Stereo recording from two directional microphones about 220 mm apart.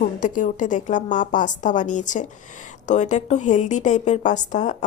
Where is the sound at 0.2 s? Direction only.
35° left (ahead or behind).